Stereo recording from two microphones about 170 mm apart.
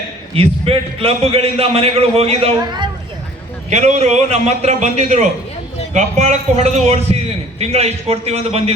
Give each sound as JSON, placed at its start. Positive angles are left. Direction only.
{"t": 0.3, "sound": "a man's voice", "side_deg": -35}
{"t": 3.7, "sound": "a man's voice", "side_deg": -45}